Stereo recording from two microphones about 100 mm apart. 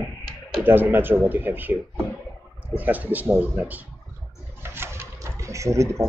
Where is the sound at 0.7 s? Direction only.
20° right (ahead or behind).